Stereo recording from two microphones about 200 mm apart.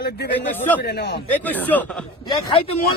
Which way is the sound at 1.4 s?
10° left (ahead or behind).